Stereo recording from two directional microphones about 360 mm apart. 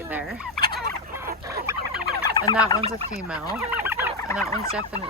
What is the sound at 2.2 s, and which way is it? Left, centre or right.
Fowl, centre.